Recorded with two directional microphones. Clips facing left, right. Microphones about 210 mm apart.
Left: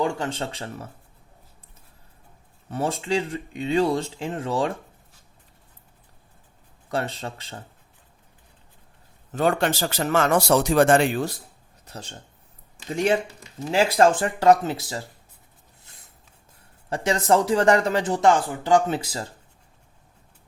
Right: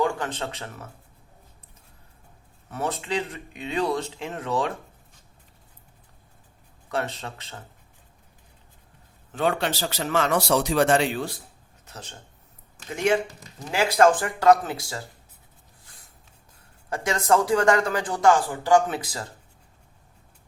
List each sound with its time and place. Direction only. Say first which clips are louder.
0.0 s speech: even; 30° left (ahead or behind)
2.6 s speech: left 3 dB; 30° left (ahead or behind)
6.8 s speech: left 1 dB; 30° left (ahead or behind)
9.3 s a man's voice: left 3 dB; 45° left (ahead or behind)
11.9 s speech: left 3 dB; 30° left (ahead or behind)
13.7 s speech: left 1 dB; 25° left (ahead or behind)
15.9 s a sound: left 1 dB; 25° left (ahead or behind)
16.9 s speech: left 2 dB; 30° left (ahead or behind)